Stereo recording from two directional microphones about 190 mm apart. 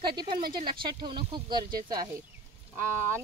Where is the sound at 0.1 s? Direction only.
25° right (ahead or behind).